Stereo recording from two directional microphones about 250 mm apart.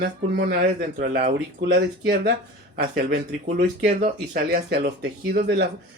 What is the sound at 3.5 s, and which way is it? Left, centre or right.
Speech, right.